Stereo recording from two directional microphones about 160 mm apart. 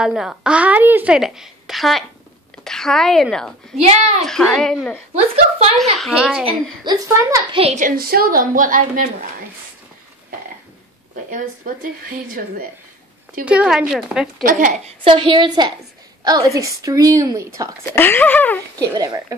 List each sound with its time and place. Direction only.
0.0 s a woman's voice: 5° right (ahead or behind)
3.8 s speech: 45° right (ahead or behind)
4.3 s a woman's voice: 5° left (ahead or behind)
5.1 s a woman's voice: 40° right (ahead or behind)
5.9 s a woman's voice: centre (ahead or behind)
6.8 s a woman's voice: 25° right (ahead or behind)
7.5 s a woman's voice: 40° right (ahead or behind)
7.8 s speech: 65° right (ahead or behind)
11.2 s speech: 55° right (ahead or behind)
13.5 s a woman's voice: 5° right (ahead or behind)
15.0 s a woman's voice: 30° right (ahead or behind)
17.9 s speech: 15° left (ahead or behind)
18.8 s a woman's voice: 20° right (ahead or behind)